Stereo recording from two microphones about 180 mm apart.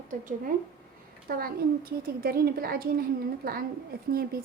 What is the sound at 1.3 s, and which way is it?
A woman's voice, 55° right (ahead or behind).